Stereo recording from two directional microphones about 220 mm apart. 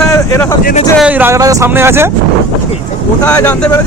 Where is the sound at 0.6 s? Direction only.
30° left (ahead or behind).